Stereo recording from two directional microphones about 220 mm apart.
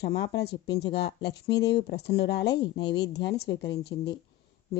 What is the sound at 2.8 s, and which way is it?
Speech, 50° left (ahead or behind).